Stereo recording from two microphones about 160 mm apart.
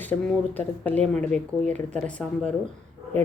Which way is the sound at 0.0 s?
10° left (ahead or behind).